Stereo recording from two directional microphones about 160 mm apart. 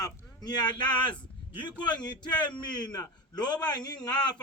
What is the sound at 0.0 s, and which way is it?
A man's voice, 25° left (ahead or behind).